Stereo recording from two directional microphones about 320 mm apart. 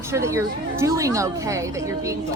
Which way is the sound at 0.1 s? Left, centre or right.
Centre.